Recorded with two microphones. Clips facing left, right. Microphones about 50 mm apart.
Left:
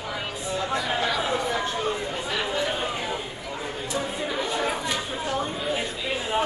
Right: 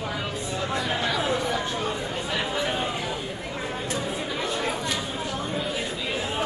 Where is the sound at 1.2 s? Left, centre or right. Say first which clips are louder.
Even; left.